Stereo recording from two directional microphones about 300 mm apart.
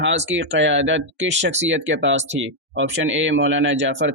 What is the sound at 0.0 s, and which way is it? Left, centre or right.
Speech, right.